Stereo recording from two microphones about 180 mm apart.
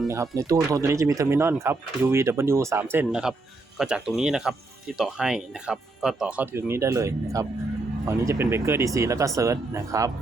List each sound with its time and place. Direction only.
0.1 s speech: 15° right (ahead or behind)